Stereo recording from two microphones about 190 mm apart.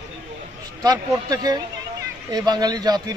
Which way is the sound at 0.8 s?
20° right (ahead or behind).